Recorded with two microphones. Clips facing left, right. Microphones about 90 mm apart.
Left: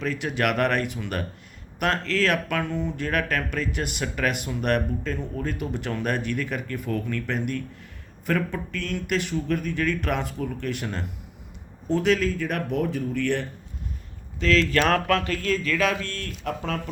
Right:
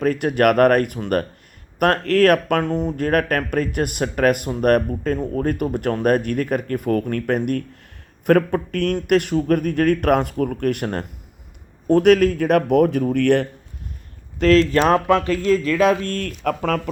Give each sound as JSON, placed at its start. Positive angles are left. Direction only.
{"t": 0.0, "sound": "speech", "side_deg": -50}
{"t": 14.3, "sound": "speech", "side_deg": -45}